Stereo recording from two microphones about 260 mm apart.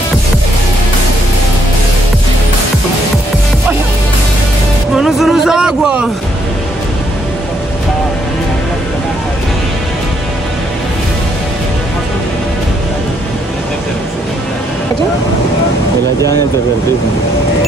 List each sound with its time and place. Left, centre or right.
4.9 s vehicle: centre